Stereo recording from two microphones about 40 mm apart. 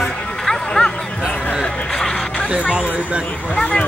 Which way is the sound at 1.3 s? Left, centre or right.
Left.